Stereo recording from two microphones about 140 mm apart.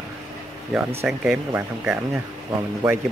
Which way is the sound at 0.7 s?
5° right (ahead or behind).